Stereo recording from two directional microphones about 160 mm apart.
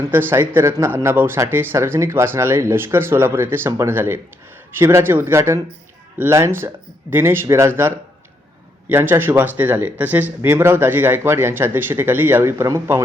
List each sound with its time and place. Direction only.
0.1 s speech: 15° right (ahead or behind)